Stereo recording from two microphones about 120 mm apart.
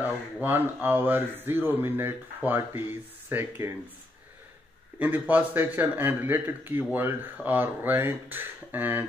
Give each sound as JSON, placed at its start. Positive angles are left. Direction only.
{"t": 0.0, "sound": "a man's voice", "side_deg": -15}
{"t": 4.9, "sound": "a man's voice", "side_deg": -15}